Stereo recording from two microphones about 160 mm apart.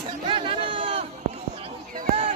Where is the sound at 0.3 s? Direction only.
35° right (ahead or behind).